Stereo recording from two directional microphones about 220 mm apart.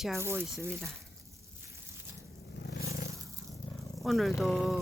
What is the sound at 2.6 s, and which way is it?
Scrape, 45° left (ahead or behind).